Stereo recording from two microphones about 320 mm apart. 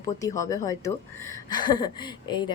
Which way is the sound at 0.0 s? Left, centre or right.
Centre.